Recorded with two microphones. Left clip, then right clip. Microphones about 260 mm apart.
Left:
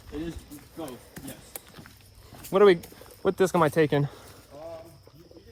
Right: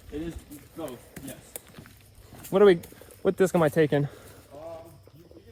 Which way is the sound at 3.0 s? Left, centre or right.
Centre.